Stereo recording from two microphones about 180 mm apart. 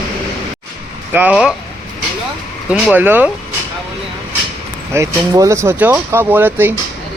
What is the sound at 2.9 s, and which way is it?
Speech, 10° right (ahead or behind).